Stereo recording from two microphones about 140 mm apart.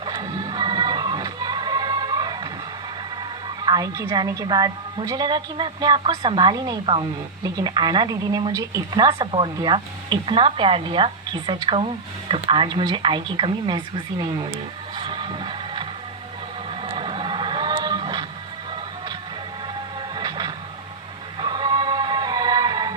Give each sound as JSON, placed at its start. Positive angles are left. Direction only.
{"t": 0.0, "sound": "music", "side_deg": -30}
{"t": 3.7, "sound": "a woman's voice", "side_deg": -25}
{"t": 9.1, "sound": "a woman's voice", "side_deg": -35}
{"t": 14.9, "sound": "music", "side_deg": -35}
{"t": 16.8, "sound": "a sound", "side_deg": -40}
{"t": 19.6, "sound": "music", "side_deg": -35}